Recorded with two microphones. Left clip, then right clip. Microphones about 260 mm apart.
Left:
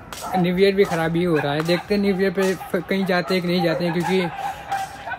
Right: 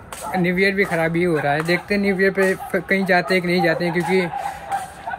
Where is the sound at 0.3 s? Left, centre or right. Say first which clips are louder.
Left 1 dB; centre.